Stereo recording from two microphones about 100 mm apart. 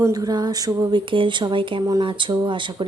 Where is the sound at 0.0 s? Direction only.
40° right (ahead or behind).